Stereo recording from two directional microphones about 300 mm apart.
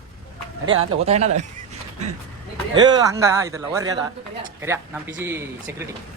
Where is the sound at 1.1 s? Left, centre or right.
Right.